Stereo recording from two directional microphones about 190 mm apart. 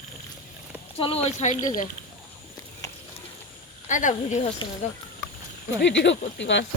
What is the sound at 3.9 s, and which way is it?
Speech, 40° left (ahead or behind).